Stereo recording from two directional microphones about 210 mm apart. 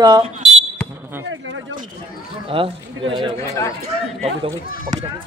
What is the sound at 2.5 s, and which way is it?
Speech, 25° right (ahead or behind).